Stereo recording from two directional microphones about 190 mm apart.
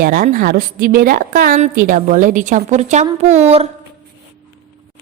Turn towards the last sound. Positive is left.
turn(degrees=-35)  # may be behind; listen again after turning